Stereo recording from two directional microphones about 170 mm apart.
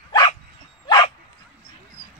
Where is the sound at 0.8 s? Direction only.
25° left (ahead or behind).